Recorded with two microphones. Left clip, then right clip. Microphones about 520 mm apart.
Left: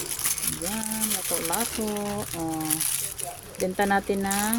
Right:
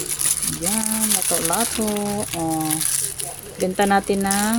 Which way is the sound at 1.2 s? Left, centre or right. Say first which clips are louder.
Right 6 dB; left.